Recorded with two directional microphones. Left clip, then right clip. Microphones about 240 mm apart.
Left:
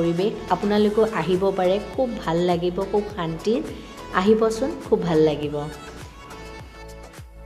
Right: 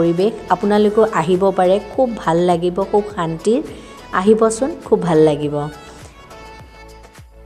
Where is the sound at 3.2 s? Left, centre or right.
Centre.